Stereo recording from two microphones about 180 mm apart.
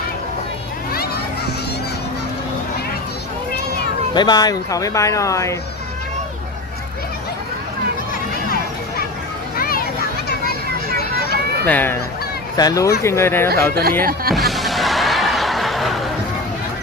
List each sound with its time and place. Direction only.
4.1 s speech: 25° left (ahead or behind)
9.6 s children playing: 55° left (ahead or behind)
11.6 s speech: 10° left (ahead or behind)
12.5 s speech: 20° left (ahead or behind)
14.0 s speech: 55° right (ahead or behind)
14.3 s snicker: centre (ahead or behind)